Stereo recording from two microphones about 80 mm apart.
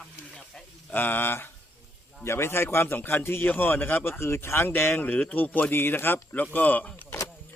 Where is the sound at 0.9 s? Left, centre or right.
Left.